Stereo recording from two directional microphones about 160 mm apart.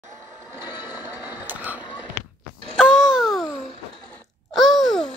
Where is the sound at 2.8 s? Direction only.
5° right (ahead or behind).